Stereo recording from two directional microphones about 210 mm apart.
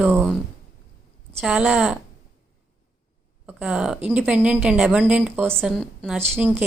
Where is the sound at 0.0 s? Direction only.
10° right (ahead or behind).